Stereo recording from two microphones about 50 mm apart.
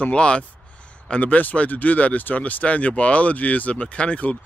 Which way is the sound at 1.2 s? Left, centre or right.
Left.